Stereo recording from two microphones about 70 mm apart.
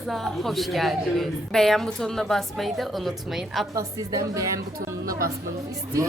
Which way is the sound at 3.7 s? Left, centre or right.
Right.